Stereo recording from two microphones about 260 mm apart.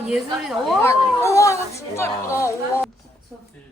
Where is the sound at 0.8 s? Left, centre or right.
Centre.